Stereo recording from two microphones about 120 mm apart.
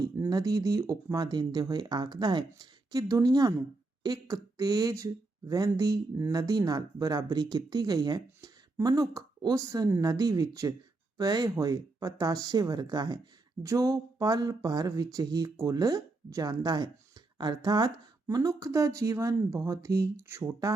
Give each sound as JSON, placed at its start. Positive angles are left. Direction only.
{"t": 0.2, "sound": "speech", "side_deg": -30}